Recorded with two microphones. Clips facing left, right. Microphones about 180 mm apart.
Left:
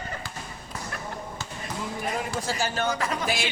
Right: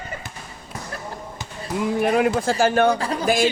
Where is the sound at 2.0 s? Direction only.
70° right (ahead or behind).